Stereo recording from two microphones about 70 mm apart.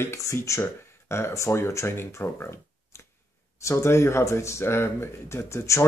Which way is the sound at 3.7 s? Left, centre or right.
Left.